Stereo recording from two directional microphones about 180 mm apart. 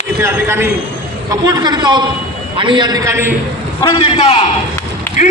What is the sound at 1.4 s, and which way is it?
A man's voice, 25° right (ahead or behind).